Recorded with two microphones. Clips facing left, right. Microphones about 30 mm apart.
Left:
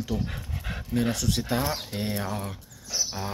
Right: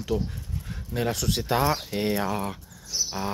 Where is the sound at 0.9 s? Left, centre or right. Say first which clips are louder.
Even; centre.